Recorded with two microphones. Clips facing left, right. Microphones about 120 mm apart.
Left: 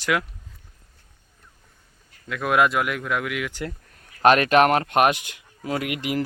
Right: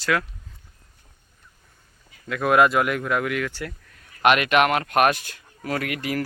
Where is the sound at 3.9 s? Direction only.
35° left (ahead or behind); by 6.2 s 20° left (ahead or behind).